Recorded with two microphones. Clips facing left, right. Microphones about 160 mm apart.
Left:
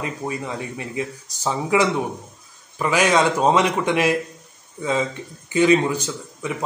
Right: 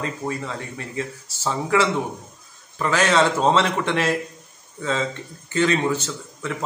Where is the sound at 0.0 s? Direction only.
15° left (ahead or behind).